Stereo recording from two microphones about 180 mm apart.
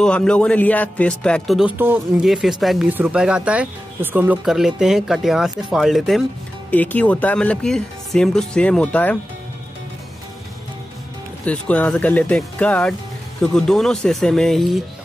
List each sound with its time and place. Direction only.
0.0 s speech: 5° left (ahead or behind)
1.8 s speech: 10° right (ahead or behind)
2.2 s speech: centre (ahead or behind)
11.4 s speech: 10° left (ahead or behind)